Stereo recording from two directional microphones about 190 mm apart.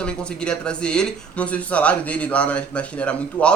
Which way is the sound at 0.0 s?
5° left (ahead or behind).